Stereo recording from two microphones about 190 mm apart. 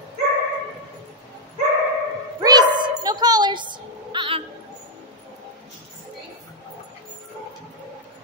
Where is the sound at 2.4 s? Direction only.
20° right (ahead or behind).